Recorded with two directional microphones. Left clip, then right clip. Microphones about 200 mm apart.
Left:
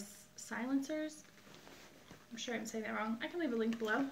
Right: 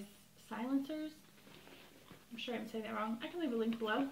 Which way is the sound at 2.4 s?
10° left (ahead or behind).